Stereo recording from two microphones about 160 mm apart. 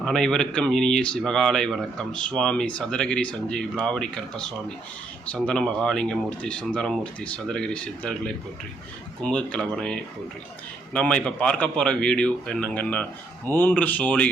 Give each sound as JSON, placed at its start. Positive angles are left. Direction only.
{"t": 0.0, "sound": "speech", "side_deg": 5}